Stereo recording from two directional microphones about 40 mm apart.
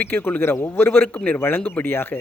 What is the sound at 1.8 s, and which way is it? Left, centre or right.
Speech, left.